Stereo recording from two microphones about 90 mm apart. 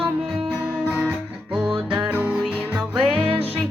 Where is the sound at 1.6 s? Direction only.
10° right (ahead or behind).